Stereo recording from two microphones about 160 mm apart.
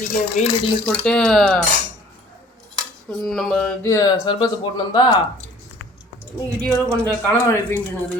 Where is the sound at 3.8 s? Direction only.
20° left (ahead or behind).